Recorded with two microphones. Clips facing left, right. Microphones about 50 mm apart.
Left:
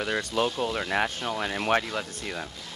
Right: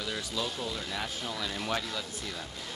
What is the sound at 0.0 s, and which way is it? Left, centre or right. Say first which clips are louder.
Speech: left 8 dB; left.